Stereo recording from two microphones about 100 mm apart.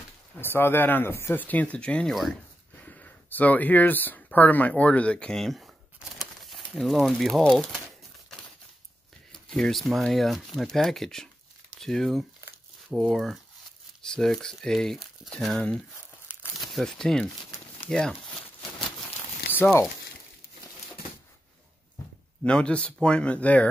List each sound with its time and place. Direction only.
0.4 s speech: 20° left (ahead or behind); by 5.7 s centre (ahead or behind)
5.9 s crumpling: centre (ahead or behind)
9.3 s speech: 5° left (ahead or behind)
19.5 s speech: 20° left (ahead or behind)
22.4 s speech: 10° left (ahead or behind)